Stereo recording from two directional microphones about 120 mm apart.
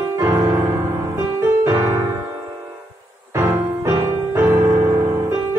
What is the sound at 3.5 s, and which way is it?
Music, 20° right (ahead or behind).